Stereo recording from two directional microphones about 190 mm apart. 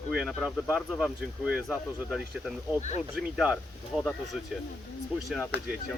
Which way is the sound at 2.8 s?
40° left (ahead or behind).